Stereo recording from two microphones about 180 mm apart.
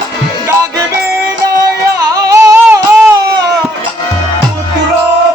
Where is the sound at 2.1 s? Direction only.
15° right (ahead or behind).